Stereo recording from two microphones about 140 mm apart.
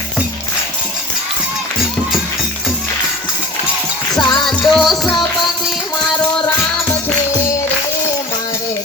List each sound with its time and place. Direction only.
4.2 s music: 35° left (ahead or behind)
4.4 s music: centre (ahead or behind)